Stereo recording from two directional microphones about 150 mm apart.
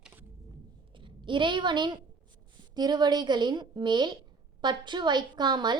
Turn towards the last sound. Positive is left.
turn(degrees=-30)  # may be behind; listen again after turning